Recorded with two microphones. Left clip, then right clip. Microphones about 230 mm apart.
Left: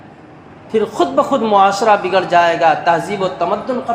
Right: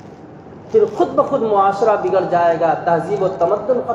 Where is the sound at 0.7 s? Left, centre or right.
Left.